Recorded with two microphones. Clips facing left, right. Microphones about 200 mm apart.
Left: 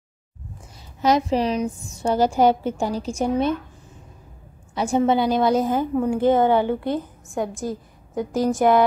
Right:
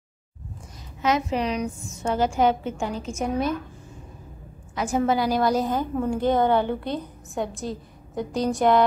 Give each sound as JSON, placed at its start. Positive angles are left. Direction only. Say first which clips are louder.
{"t": 1.0, "sound": "a woman's voice", "louder": "left 4 dB", "side_deg": 35}
{"t": 4.7, "sound": "a woman's voice", "louder": "left 3 dB", "side_deg": 30}
{"t": 5.4, "sound": "a woman's voice", "louder": "left 3 dB", "side_deg": 0}
{"t": 5.7, "sound": "a woman's voice", "louder": "left 4 dB", "side_deg": 10}
{"t": 7.2, "sound": "a woman's voice", "louder": "left 2 dB", "side_deg": 0}